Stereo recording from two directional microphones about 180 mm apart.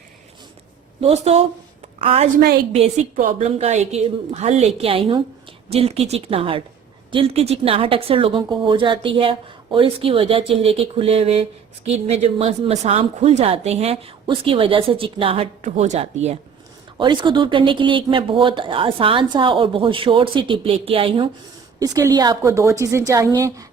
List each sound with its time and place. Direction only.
1.0 s a woman's voice: 35° right (ahead or behind)
3.2 s a woman's voice: 50° right (ahead or behind)
3.4 s a woman's voice: 35° right (ahead or behind)
17.0 s speech: 25° right (ahead or behind)
21.8 s a woman's voice: 20° right (ahead or behind)